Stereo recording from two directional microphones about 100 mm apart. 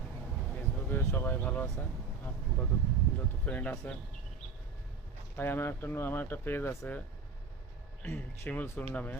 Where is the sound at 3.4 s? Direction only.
15° left (ahead or behind).